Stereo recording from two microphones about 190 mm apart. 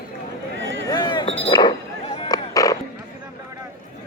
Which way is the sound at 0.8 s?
25° left (ahead or behind).